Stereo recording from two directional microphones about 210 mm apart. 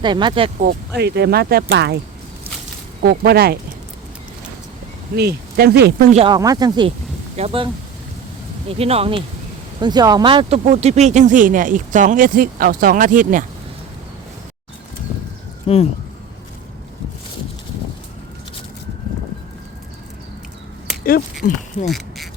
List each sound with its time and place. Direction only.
0.0 s speech: 20° right (ahead or behind)
0.6 s speech: 50° right (ahead or behind)
3.0 s speech: 50° right (ahead or behind)
5.1 s speech: 50° right (ahead or behind)
6.1 s speech: 25° right (ahead or behind)
8.8 s speech: 30° right (ahead or behind)
15.6 s speech: 30° left (ahead or behind)
21.0 s speech: 45° left (ahead or behind)
21.8 s a sound: centre (ahead or behind)